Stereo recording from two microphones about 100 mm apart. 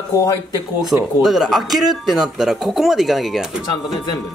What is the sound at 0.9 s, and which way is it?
Speech, 15° right (ahead or behind).